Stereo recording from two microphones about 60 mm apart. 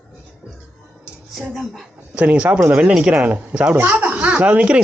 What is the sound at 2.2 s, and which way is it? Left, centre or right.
Speech, right.